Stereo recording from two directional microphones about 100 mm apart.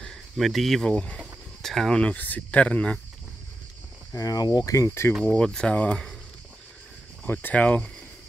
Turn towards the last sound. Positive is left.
turn(degrees=15)  # may be behind; listen again after turning